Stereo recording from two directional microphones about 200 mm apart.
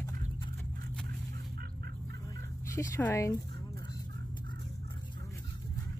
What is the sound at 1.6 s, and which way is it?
Fowl, 50° right (ahead or behind).